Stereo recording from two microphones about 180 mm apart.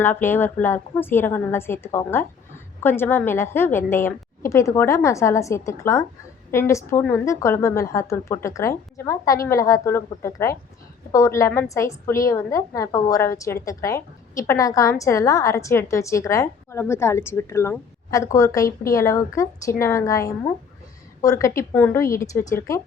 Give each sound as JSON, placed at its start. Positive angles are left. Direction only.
{"t": 0.0, "sound": "a woman's voice", "side_deg": 10}